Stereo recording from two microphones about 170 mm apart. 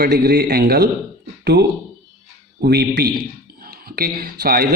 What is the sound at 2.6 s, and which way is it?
A man's voice, 70° right (ahead or behind).